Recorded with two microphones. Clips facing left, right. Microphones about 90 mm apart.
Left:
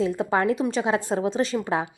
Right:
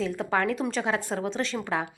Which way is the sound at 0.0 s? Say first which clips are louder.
Left 4 dB; 20° left (ahead or behind).